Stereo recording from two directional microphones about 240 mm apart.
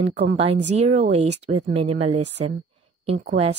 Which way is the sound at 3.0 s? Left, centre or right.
Right.